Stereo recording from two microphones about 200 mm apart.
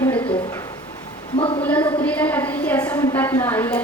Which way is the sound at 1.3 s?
30° left (ahead or behind).